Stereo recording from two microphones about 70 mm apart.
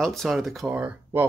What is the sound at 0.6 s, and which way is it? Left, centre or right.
Speech, right.